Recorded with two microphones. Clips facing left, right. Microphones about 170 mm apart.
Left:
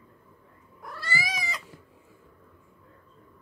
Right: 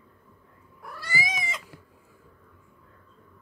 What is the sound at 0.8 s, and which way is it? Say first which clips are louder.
Cat: even; 10° right (ahead or behind).